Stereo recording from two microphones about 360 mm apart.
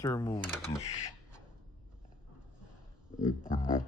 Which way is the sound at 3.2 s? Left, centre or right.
Left.